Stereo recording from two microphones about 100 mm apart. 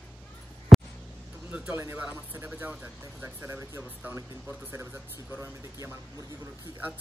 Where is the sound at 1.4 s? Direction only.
15° right (ahead or behind).